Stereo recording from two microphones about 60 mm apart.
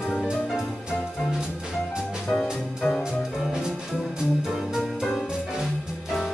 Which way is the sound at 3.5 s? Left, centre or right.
Centre.